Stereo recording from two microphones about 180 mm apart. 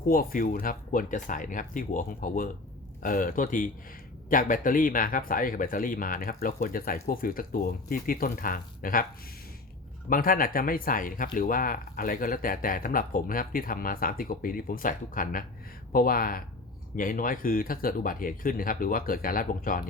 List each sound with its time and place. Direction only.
0.0 s speech: 55° left (ahead or behind)
10.1 s speech: 50° left (ahead or behind)